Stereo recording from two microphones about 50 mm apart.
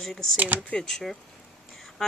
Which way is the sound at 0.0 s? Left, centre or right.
Centre.